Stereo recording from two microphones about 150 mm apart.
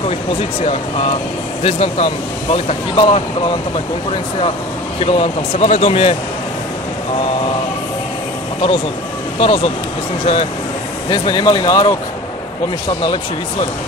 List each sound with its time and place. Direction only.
0.4 s speech: 40° left (ahead or behind)
5.0 s speech: 40° left (ahead or behind)
9.4 s speech: 40° left (ahead or behind)